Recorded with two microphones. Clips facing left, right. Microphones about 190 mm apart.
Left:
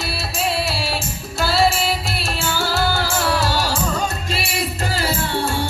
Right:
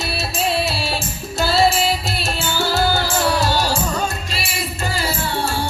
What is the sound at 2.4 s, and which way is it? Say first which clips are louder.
Music: right 2 dB; 20° right (ahead or behind).